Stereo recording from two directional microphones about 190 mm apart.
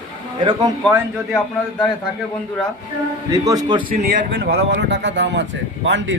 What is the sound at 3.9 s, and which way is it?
A man's voice, 50° right (ahead or behind).